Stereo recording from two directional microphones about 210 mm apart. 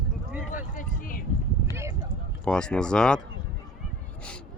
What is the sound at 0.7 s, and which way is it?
Vehicle, 40° left (ahead or behind).